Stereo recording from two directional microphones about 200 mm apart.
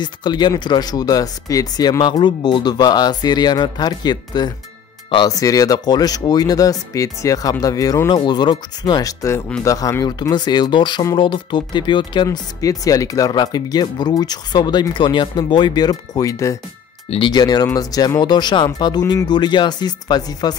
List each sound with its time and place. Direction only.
0.0 s speech: 20° left (ahead or behind)